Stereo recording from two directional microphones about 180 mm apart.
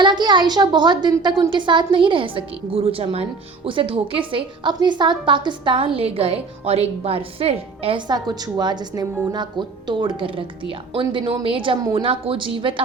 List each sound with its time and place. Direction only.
0.0 s a woman's voice: 25° right (ahead or behind)